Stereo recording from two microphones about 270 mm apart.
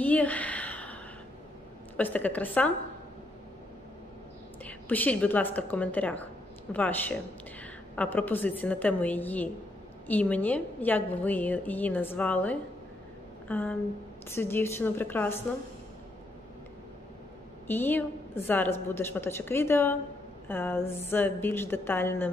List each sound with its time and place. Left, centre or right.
0.0 s a sound: centre
2.0 s a woman's voice: centre
4.6 s a woman's voice: centre
17.6 s a woman's voice: centre